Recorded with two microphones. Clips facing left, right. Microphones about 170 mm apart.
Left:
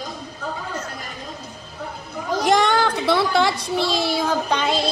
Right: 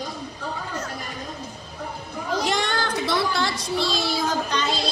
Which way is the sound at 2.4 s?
50° left (ahead or behind).